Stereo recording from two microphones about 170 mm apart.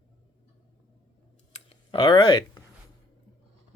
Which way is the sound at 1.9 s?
30° left (ahead or behind).